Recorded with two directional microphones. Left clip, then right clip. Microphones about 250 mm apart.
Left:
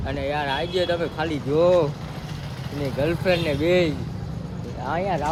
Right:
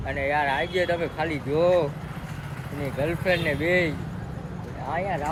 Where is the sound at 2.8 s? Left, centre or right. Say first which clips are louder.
Left 3 dB; centre.